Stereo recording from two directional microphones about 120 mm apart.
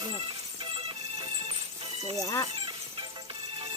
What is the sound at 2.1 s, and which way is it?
Speech, 25° left (ahead or behind).